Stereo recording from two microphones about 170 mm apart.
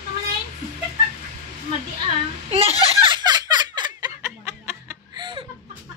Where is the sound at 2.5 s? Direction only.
40° right (ahead or behind).